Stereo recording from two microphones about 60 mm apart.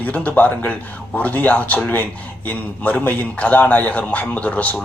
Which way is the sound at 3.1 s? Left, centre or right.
Left.